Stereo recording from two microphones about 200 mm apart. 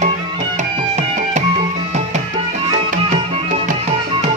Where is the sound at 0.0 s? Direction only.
35° right (ahead or behind).